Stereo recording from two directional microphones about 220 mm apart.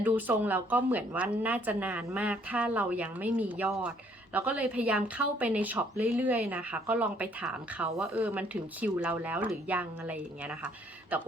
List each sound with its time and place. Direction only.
0.0 s speech: 10° right (ahead or behind)